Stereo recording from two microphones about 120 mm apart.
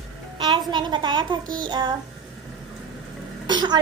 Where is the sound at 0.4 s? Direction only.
40° right (ahead or behind).